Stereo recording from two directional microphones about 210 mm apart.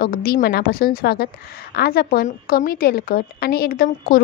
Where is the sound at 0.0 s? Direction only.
45° left (ahead or behind).